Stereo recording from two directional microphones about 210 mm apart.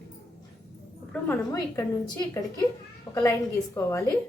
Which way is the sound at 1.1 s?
10° left (ahead or behind).